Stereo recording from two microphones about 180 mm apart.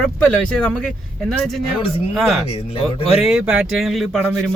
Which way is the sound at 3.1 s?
5° right (ahead or behind).